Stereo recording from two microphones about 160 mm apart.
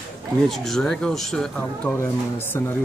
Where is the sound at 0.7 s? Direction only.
5° left (ahead or behind).